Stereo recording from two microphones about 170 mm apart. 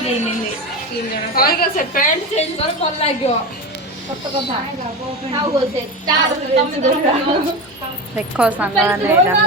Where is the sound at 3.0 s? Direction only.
35° left (ahead or behind).